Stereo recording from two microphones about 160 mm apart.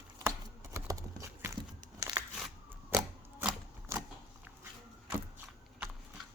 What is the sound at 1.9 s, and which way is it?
Crushing, 25° right (ahead or behind).